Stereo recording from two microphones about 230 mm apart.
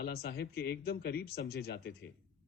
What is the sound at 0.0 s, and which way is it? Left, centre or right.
Speech, left.